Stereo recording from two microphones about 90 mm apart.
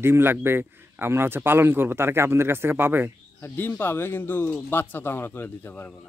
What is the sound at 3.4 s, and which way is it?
Speech, 25° left (ahead or behind).